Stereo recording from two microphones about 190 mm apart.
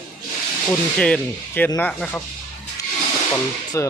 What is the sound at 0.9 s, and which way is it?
Speech, 5° left (ahead or behind).